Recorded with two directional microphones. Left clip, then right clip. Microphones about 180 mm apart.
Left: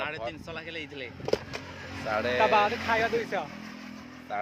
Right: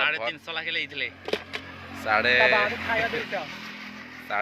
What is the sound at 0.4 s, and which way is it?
Speech, 35° left (ahead or behind).